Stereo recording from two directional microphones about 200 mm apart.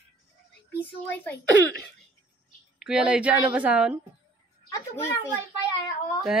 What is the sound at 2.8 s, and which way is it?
A woman's voice, 5° right (ahead or behind).